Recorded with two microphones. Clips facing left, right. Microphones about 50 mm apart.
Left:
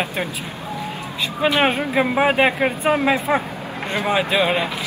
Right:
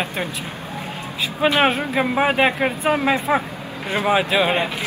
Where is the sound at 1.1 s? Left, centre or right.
Centre.